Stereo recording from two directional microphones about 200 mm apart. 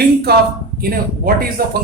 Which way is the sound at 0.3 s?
50° right (ahead or behind).